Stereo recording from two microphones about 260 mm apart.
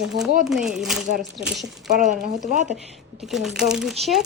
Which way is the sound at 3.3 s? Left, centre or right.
Centre.